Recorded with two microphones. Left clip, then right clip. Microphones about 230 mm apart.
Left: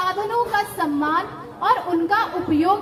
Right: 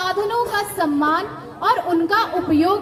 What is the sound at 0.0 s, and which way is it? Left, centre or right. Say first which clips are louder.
A woman's voice: right 1 dB; right.